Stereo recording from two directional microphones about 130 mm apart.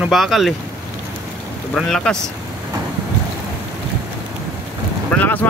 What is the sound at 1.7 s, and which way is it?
Speech, 5° left (ahead or behind).